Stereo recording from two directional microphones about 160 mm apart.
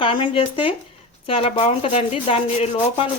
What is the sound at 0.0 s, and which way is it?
Speech, 35° left (ahead or behind).